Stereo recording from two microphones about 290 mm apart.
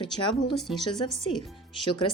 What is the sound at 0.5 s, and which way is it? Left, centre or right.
Speech, centre.